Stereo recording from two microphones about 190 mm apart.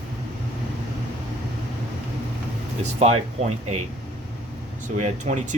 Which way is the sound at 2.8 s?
35° right (ahead or behind).